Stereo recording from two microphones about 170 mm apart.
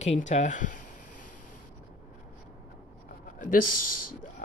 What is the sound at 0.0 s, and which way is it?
Speech, 40° left (ahead or behind).